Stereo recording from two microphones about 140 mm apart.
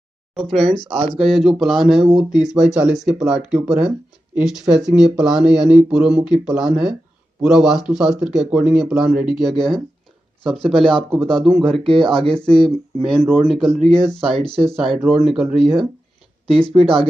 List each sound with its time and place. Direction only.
0.5 s speech: centre (ahead or behind)
0.9 s speech: 40° right (ahead or behind)
1.2 s speech: centre (ahead or behind)
11.8 s speech: 40° right (ahead or behind)
12.4 s speech: 5° left (ahead or behind)